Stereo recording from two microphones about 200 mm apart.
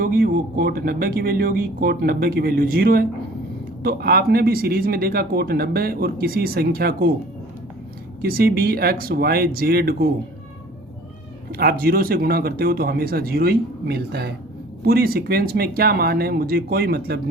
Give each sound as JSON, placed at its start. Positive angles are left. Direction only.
{"t": 0.0, "sound": "speech", "side_deg": -45}
{"t": 8.2, "sound": "speech", "side_deg": -50}
{"t": 11.5, "sound": "speech", "side_deg": -50}